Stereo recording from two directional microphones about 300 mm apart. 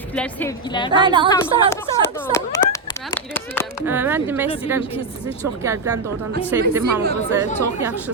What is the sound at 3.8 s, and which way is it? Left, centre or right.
Speech, centre.